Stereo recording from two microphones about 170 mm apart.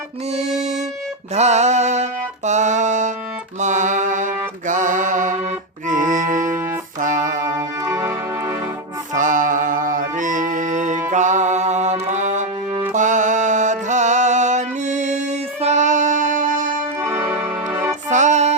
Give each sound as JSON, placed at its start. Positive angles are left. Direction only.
{"t": 1.4, "sound": "music", "side_deg": -40}
{"t": 3.6, "sound": "mantra", "side_deg": -45}
{"t": 5.9, "sound": "music", "side_deg": -50}
{"t": 7.5, "sound": "music", "side_deg": -20}
{"t": 9.1, "sound": "music", "side_deg": -50}
{"t": 17.0, "sound": "music", "side_deg": -15}
{"t": 18.1, "sound": "music", "side_deg": -45}